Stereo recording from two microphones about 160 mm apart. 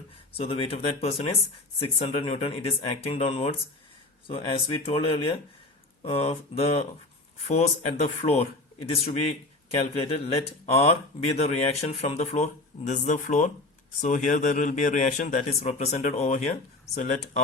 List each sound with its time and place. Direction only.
0.3 s speech: 35° left (ahead or behind)